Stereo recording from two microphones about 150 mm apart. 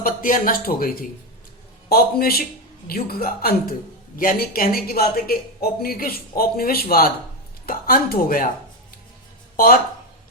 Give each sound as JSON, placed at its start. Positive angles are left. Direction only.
{"t": 0.0, "sound": "speech", "side_deg": 65}
{"t": 1.9, "sound": "a woman's voice", "side_deg": 85}
{"t": 4.2, "sound": "a woman's voice", "side_deg": 75}
{"t": 9.6, "sound": "speech", "side_deg": 70}